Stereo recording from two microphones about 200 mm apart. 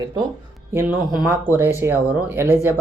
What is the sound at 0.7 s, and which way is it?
Speech, 10° right (ahead or behind).